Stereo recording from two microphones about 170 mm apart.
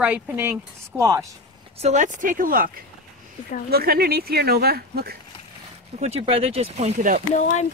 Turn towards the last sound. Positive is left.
turn(degrees=45)  # may be behind; listen again after turning